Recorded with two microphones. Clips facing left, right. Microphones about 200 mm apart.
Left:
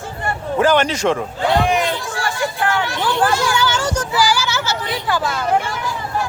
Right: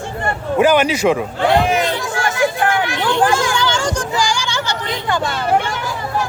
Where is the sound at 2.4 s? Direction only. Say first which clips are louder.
Right 4 dB; 50° right (ahead or behind).